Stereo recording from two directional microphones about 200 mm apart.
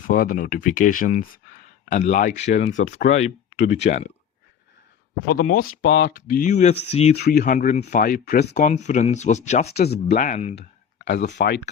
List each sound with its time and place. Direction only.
0.1 s speech: 45° left (ahead or behind)
5.3 s speech: 45° left (ahead or behind)
5.6 s speech: 80° left; by 7.2 s 30° left (ahead or behind)
7.2 s speech: 50° left (ahead or behind)
9.7 s speech: 55° left (ahead or behind)
10.1 s speech: 35° left (ahead or behind)
11.0 s speech: 55° left (ahead or behind)